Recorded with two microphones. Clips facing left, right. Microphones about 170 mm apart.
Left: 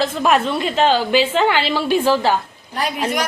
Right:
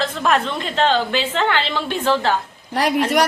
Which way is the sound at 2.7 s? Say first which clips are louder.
Right 5 dB; 80° right.